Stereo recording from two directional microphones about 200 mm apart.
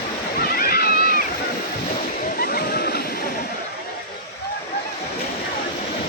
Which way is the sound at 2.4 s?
50° left (ahead or behind).